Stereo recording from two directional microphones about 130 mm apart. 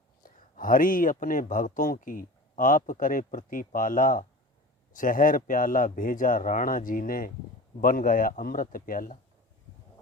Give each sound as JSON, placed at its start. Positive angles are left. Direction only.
{"t": 0.2, "sound": "a man's voice", "side_deg": 90}